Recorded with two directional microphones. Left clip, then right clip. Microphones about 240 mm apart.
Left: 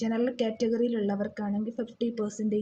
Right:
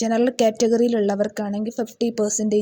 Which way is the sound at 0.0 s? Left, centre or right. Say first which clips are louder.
Right 10 dB; right.